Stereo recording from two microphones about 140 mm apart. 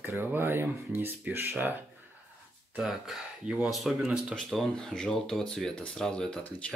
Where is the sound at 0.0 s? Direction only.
15° right (ahead or behind).